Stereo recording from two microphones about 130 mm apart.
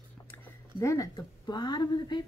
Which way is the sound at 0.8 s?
25° left (ahead or behind).